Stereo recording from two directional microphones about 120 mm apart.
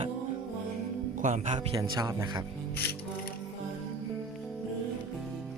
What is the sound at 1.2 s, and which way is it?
Speech, 90° right.